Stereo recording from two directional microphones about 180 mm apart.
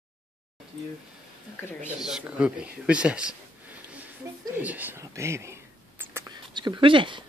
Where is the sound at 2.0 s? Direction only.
5° right (ahead or behind).